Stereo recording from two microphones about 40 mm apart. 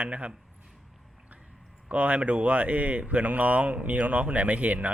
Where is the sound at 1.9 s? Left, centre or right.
Right.